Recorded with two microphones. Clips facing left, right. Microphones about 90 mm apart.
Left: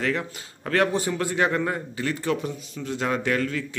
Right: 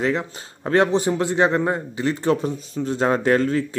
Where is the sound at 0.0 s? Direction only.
20° right (ahead or behind).